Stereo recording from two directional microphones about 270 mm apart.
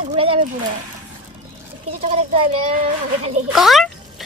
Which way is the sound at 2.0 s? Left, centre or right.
Right.